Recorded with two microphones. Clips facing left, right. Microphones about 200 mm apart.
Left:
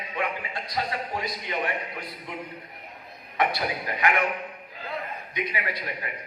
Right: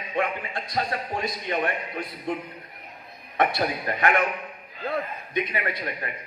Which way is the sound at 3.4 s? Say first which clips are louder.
Right 3 dB; 50° right (ahead or behind).